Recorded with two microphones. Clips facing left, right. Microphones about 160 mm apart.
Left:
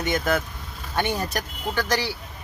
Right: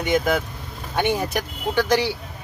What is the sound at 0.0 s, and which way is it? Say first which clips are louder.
Speech: right 3 dB; 15° right (ahead or behind).